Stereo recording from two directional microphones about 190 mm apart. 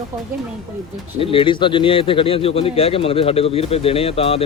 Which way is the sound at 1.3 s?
25° left (ahead or behind).